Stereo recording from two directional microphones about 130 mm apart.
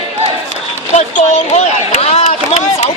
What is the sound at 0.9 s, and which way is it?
Speech, 55° left (ahead or behind).